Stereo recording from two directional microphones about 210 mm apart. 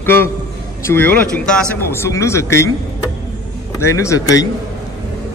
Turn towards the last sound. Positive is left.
turn(degrees=15)  # may be behind; listen again after turning